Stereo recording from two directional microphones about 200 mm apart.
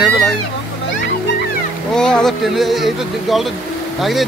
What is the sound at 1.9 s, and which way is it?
Speech, 5° left (ahead or behind).